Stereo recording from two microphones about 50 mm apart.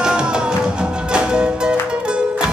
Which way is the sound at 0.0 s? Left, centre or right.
Centre.